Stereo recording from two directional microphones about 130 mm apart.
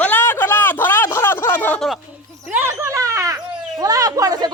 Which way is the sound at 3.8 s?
25° right (ahead or behind).